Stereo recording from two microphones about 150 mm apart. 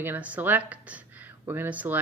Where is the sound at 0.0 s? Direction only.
10° right (ahead or behind).